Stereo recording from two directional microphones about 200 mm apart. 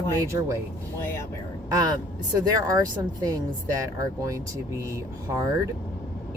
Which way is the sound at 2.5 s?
20° right (ahead or behind).